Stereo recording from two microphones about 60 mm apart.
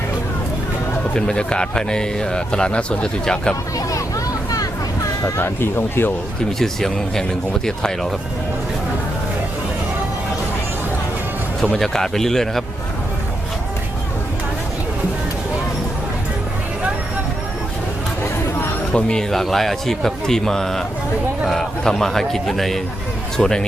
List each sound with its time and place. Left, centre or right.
1.1 s speech: centre
5.4 s speech: left
6.6 s speech: centre
11.6 s speech: centre
18.9 s speech: centre